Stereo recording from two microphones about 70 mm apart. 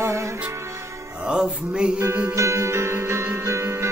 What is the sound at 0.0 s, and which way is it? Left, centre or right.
Music, right.